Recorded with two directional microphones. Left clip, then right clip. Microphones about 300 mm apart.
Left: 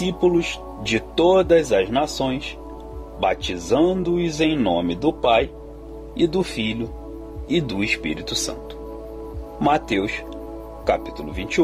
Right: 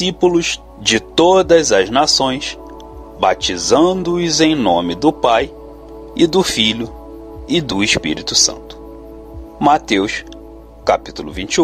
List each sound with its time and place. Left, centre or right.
0.0 s a man's voice: centre
9.6 s speech: centre